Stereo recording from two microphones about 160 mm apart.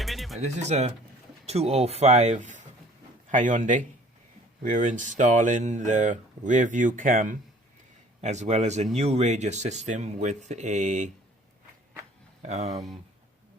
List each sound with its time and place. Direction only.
0.0 s music: centre (ahead or behind)
0.3 s speech: 45° right (ahead or behind)
12.4 s speech: 45° right (ahead or behind)